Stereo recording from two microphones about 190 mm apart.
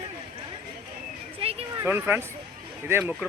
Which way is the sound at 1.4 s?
30° right (ahead or behind).